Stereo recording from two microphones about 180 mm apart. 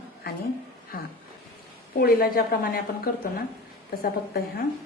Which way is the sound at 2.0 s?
55° left (ahead or behind).